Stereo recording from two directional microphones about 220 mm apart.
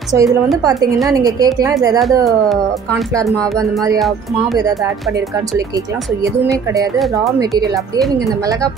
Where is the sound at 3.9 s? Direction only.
Centre (ahead or behind).